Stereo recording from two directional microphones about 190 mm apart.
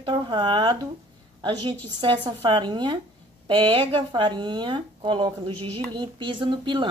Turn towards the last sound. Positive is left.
turn(degrees=-25)  # may be behind; listen again after turning